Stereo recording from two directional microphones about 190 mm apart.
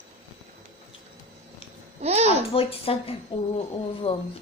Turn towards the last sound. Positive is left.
turn(degrees=30)  # may be behind; listen again after turning